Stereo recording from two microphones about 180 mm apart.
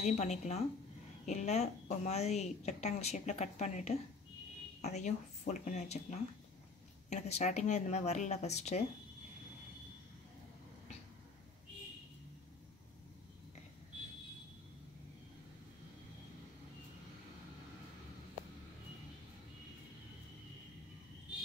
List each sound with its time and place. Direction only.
0.0 s a woman's voice: 40° left (ahead or behind)